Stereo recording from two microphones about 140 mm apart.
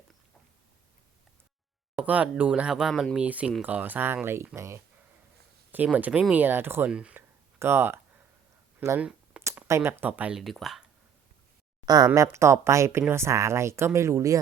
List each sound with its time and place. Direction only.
2.0 s speech: 10° right (ahead or behind)
9.0 s a sound: 5° right (ahead or behind)
9.6 s speech: 20° right (ahead or behind)
10.4 s speech: centre (ahead or behind)
11.9 s speech: 25° right (ahead or behind)